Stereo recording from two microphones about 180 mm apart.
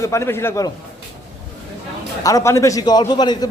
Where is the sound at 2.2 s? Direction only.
15° left (ahead or behind).